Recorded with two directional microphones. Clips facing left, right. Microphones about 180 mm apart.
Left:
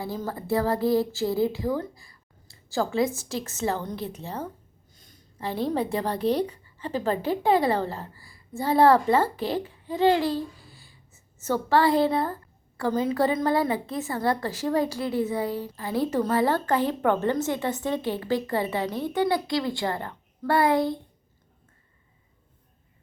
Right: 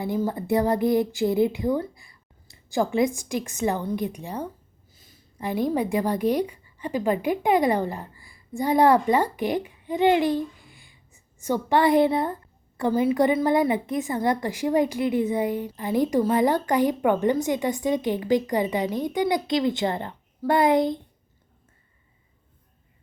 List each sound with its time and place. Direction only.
0.0 s speech: 20° right (ahead or behind)
4.9 s a sound: 5° right (ahead or behind)
5.4 s a woman's voice: 15° right (ahead or behind)